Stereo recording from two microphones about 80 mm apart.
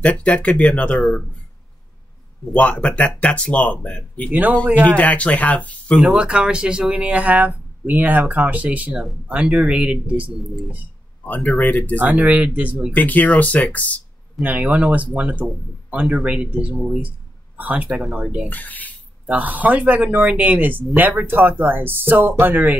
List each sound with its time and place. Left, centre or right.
0.0 s speech: centre
2.5 s speech: centre
4.3 s speech: right
4.8 s speech: centre
5.9 s speech: centre
11.2 s speech: centre
12.1 s speech: centre
12.9 s speech: left
14.4 s speech: centre
17.9 s speech: centre
18.5 s speech: left
19.2 s speech: centre